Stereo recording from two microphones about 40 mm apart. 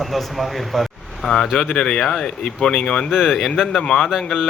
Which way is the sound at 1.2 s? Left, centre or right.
Centre.